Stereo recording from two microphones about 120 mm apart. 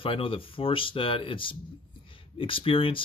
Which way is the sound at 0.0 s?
50° left (ahead or behind).